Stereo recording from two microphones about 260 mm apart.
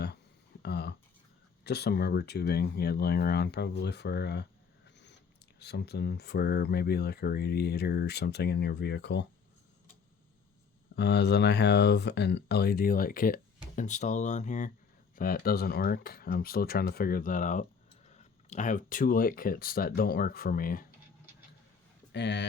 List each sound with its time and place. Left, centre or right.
0.6 s a sound: left
1.6 s speech: left
5.5 s speech: left
10.9 s speech: left
22.1 s speech: left